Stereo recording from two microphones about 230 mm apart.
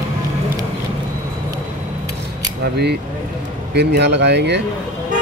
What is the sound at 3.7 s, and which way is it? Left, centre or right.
Speech, right.